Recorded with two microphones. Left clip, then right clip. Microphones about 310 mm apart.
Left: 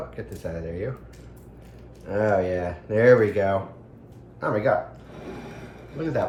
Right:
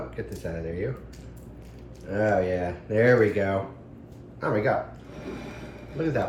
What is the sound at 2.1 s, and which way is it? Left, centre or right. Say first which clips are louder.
Speech: left 2 dB; centre.